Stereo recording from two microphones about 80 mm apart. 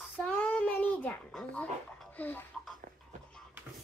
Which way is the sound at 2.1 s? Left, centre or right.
Left.